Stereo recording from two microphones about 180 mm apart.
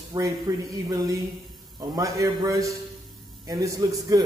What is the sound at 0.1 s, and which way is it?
A man's voice, 25° right (ahead or behind).